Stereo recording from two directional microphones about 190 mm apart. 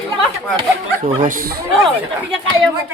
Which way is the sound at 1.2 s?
45° right (ahead or behind).